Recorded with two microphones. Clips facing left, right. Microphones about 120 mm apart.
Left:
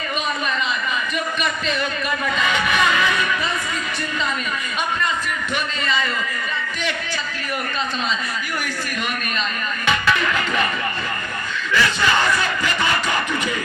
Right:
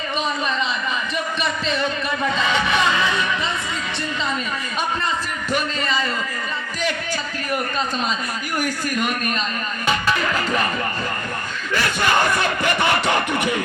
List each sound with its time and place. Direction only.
1.6 s music: 30° right (ahead or behind)
5.8 s a man's voice: 40° right (ahead or behind)
9.8 s music: 40° right (ahead or behind)
11.7 s a sound: 50° right (ahead or behind)